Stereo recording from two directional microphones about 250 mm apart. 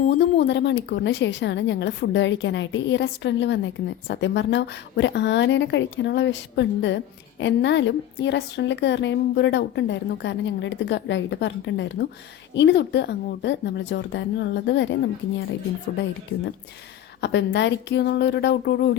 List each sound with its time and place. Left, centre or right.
0.2 s a woman's voice: left
17.2 s a woman's voice: left